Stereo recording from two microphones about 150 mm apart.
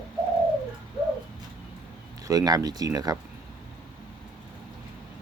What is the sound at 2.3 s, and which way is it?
Speech, 25° right (ahead or behind).